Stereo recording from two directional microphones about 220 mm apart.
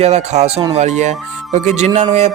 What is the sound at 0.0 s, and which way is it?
Speech, 30° right (ahead or behind).